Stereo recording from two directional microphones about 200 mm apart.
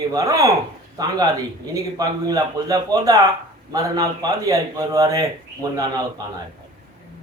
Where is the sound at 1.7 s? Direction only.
20° right (ahead or behind).